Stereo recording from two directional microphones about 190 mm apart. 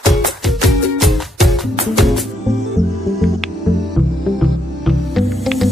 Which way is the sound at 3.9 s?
Centre (ahead or behind).